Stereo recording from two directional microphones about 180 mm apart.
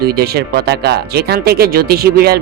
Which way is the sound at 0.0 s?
60° right (ahead or behind).